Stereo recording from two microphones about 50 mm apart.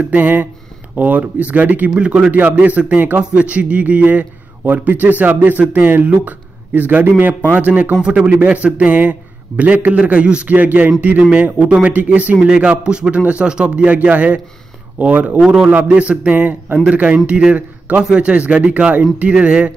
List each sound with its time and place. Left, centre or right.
0.0 s a man's voice: right
2.0 s a man's voice: right
7.9 s speech: centre
10.5 s a man's voice: right
12.4 s speech: centre
13.8 s a man's voice: right
15.4 s speech: centre
15.7 s a man's voice: right